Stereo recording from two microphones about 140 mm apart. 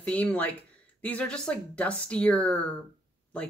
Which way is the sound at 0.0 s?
10° left (ahead or behind).